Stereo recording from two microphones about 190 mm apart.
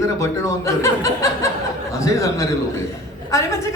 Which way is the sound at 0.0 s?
15° left (ahead or behind).